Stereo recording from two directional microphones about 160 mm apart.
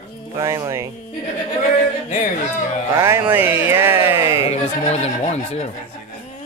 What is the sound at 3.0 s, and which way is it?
Speech, 15° right (ahead or behind).